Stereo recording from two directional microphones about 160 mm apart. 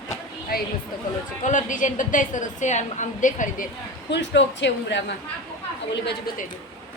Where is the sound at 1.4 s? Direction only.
50° left (ahead or behind).